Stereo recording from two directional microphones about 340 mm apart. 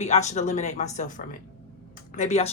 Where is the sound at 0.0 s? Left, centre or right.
Centre.